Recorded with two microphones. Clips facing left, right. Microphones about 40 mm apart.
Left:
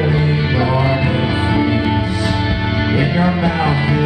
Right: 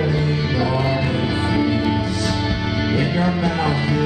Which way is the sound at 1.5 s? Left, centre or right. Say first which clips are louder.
Left 2 dB; left.